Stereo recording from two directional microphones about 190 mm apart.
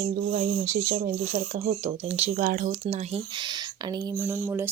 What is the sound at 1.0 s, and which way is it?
Speech, 40° right (ahead or behind).